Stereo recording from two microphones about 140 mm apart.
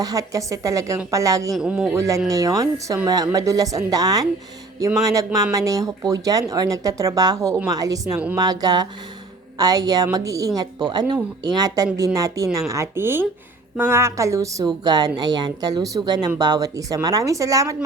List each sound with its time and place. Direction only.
0.0 s speech: 25° right (ahead or behind)
1.5 s speech: 5° right (ahead or behind)
2.0 s speech: 20° right (ahead or behind)